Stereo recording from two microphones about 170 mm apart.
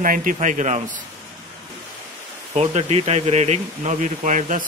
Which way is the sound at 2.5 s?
40° right (ahead or behind).